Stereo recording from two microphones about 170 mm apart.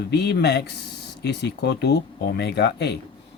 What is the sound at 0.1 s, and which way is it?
Speech, 80° left.